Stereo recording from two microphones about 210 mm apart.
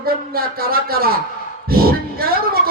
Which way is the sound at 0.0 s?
45° right (ahead or behind).